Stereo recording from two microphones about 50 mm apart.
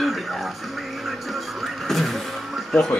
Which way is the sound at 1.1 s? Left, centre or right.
Centre.